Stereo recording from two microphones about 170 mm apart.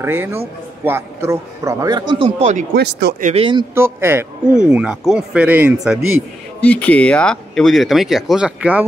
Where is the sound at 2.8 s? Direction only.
80° right.